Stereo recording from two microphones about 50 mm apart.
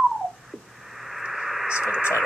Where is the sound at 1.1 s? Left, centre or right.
Centre.